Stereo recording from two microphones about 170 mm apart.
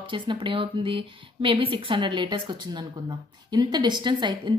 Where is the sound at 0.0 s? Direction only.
30° right (ahead or behind).